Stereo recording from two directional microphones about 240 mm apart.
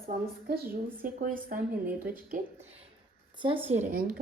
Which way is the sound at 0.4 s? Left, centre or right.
Right.